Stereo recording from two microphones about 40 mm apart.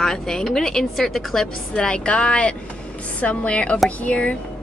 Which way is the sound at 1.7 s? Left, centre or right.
Left.